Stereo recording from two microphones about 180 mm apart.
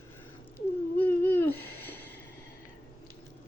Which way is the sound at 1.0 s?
10° left (ahead or behind).